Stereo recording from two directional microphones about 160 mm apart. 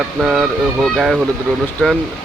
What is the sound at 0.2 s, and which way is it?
Speech, centre (ahead or behind).